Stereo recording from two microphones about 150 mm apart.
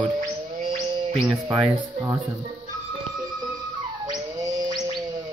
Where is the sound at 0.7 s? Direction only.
40° right (ahead or behind).